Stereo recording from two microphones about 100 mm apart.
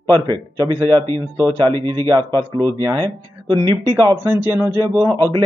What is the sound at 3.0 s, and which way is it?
Speech, 50° right (ahead or behind).